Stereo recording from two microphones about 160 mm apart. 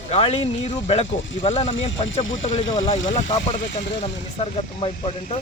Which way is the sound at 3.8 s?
90° left.